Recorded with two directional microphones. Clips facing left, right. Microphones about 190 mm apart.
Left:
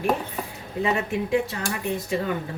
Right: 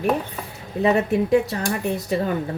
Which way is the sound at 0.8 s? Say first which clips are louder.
Right 6 dB; 40° right (ahead or behind).